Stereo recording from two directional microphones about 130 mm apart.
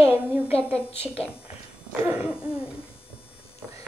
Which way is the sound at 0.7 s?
50° left (ahead or behind).